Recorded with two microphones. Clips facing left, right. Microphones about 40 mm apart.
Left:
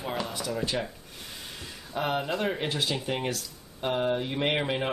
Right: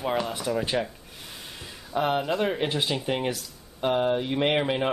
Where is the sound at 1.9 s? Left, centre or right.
Centre.